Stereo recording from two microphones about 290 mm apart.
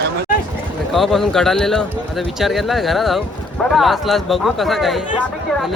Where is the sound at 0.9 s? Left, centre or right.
Centre.